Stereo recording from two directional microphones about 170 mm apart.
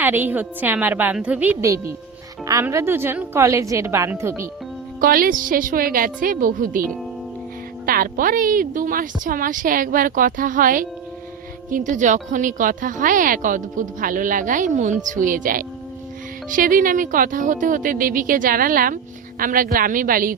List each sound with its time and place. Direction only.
0.0 s a woman's voice: 10° right (ahead or behind)
4.9 s a woman's voice: 60° right (ahead or behind)
7.9 s a woman's voice: 55° right (ahead or behind)